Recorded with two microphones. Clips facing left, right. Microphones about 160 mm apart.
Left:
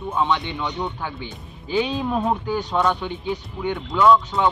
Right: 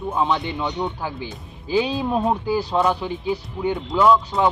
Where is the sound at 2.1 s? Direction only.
5° right (ahead or behind).